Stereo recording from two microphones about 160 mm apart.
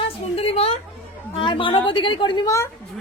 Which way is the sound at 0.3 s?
40° left (ahead or behind).